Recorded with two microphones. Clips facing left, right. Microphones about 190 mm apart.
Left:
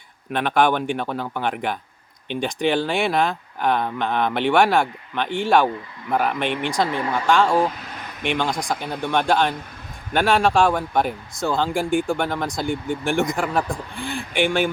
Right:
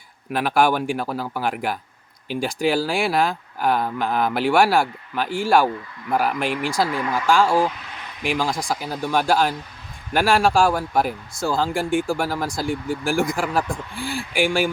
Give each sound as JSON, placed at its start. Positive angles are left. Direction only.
{"t": 0.3, "sound": "speech", "side_deg": -5}
{"t": 6.8, "sound": "speech", "side_deg": 25}
{"t": 7.3, "sound": "speech", "side_deg": -5}